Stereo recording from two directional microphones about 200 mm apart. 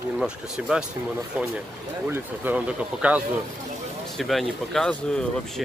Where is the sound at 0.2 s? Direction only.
5° right (ahead or behind).